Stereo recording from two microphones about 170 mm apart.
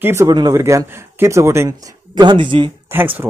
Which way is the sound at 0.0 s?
15° right (ahead or behind).